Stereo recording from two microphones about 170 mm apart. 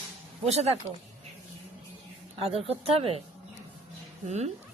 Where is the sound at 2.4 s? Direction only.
35° right (ahead or behind).